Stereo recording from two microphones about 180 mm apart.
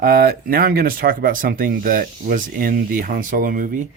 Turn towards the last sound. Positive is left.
turn(degrees=-50)  # may be behind; listen again after turning